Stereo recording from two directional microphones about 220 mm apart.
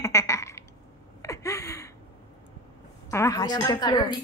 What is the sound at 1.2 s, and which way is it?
Gasp, 15° left (ahead or behind).